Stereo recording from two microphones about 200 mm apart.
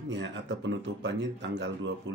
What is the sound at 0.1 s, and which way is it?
Speech, 65° right (ahead or behind).